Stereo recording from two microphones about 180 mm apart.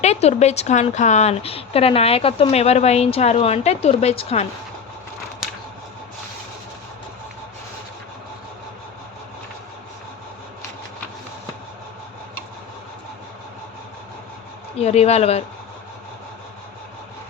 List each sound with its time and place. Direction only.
0.0 s a woman's voice: 35° left (ahead or behind)
14.8 s a woman's voice: 35° left (ahead or behind)